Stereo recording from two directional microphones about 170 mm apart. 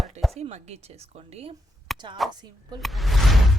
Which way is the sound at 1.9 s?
Centre (ahead or behind).